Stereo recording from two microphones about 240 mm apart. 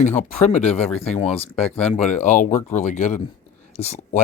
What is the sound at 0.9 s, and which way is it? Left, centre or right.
Speech, centre.